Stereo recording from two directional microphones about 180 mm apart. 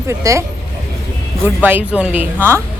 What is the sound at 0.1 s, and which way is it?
Speech, 15° right (ahead or behind).